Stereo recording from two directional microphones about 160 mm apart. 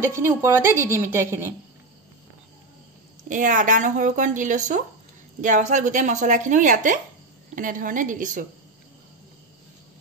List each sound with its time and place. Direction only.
0.0 s a woman's voice: 15° right (ahead or behind)
3.3 s a woman's voice: 55° right (ahead or behind)